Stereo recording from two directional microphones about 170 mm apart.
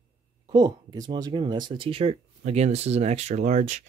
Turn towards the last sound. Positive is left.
turn(degrees=-45)  # may be behind; listen again after turning